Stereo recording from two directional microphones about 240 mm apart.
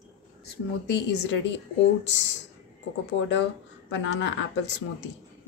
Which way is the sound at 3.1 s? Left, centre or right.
Left.